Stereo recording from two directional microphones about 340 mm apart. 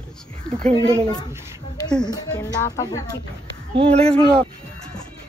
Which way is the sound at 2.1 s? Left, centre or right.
Centre.